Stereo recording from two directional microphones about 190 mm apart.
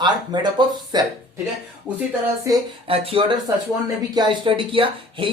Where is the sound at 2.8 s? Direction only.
30° right (ahead or behind).